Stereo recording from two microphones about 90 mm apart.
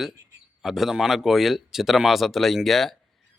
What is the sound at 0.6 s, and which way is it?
Speech, 5° right (ahead or behind).